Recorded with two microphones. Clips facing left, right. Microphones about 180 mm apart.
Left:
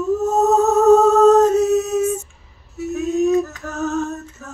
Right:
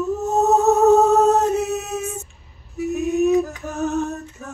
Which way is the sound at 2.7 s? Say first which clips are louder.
Even; 15° right (ahead or behind).